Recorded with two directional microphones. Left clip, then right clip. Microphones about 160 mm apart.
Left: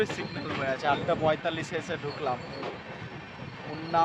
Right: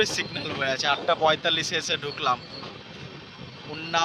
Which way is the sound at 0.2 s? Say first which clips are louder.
Right 5 dB; 60° right (ahead or behind).